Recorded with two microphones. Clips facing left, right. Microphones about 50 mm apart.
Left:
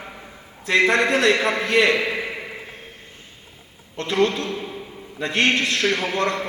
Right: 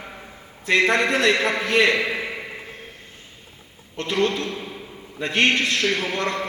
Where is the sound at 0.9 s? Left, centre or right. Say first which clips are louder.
Left 1 dB; left.